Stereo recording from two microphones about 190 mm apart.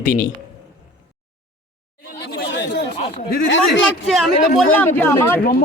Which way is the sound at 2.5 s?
65° left (ahead or behind).